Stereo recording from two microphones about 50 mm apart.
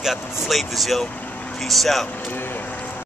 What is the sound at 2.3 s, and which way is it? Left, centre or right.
Vehicle, left.